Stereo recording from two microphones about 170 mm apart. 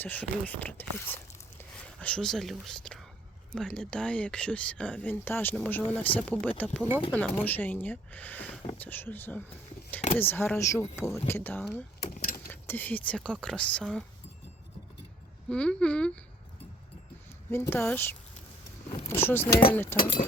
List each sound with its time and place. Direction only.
0.0 s speech: 10° left (ahead or behind)
12.0 s keys jangling: 50° left (ahead or behind)
12.5 s speech: 10° left (ahead or behind)
15.4 s speech: 5° left (ahead or behind)
17.5 s speech: 10° left (ahead or behind)